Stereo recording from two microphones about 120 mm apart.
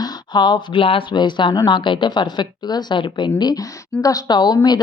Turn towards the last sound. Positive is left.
turn(degrees=35)  # may be behind; listen again after turning